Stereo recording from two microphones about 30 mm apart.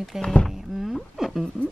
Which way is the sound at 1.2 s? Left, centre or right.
Centre.